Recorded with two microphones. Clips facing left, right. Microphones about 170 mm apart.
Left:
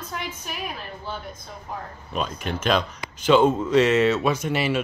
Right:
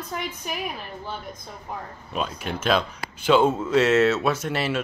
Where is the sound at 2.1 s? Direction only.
5° right (ahead or behind).